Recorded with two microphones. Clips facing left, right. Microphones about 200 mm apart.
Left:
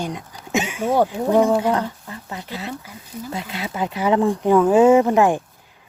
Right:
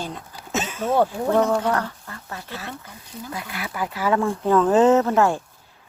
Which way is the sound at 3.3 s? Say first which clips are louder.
Left 3 dB; 25° left (ahead or behind).